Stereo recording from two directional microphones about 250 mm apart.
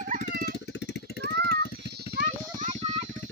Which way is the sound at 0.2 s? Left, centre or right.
Left.